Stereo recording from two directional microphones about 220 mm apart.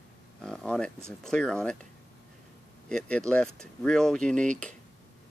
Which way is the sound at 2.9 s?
5° left (ahead or behind).